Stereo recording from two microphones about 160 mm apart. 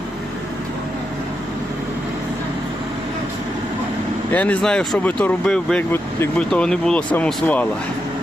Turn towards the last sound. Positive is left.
turn(degrees=10)  # may be behind; listen again after turning